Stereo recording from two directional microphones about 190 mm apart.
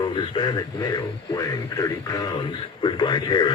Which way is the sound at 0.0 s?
25° left (ahead or behind).